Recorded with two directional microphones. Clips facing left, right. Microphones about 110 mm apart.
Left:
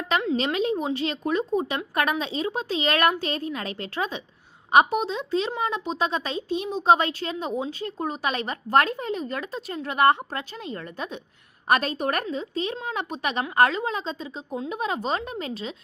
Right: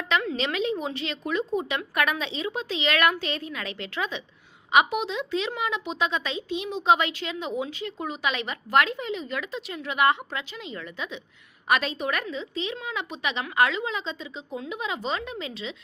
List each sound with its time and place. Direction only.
0.3 s a woman's voice: 40° left (ahead or behind)